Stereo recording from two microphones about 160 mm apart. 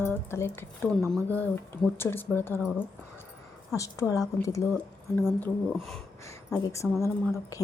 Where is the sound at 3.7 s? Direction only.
20° left (ahead or behind).